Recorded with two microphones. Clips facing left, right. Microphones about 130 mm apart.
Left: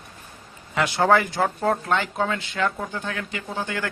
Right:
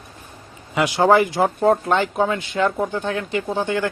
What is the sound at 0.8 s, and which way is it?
Speech, 15° right (ahead or behind).